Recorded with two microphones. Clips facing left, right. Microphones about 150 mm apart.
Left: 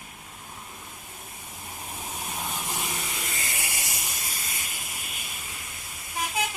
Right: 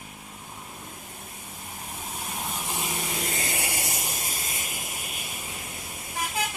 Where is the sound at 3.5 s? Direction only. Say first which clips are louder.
Right 5 dB; 30° right (ahead or behind).